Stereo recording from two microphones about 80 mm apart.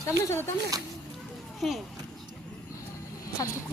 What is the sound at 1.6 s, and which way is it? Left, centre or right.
Speech, centre.